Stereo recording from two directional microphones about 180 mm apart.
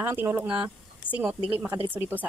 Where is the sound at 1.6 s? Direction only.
30° right (ahead or behind).